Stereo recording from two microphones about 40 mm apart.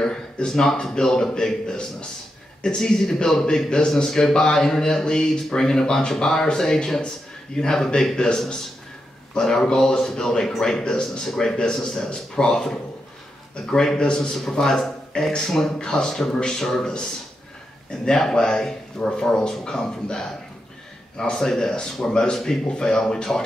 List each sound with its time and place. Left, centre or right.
0.0 s a man's voice: centre
14.3 s speech: centre